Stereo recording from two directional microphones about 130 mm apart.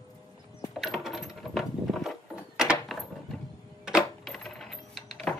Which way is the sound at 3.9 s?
Centre (ahead or behind).